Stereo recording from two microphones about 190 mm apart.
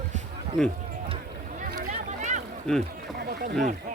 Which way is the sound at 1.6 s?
45° right (ahead or behind).